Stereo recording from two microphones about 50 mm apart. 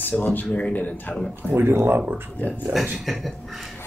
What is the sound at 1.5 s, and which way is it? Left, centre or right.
Speech, right.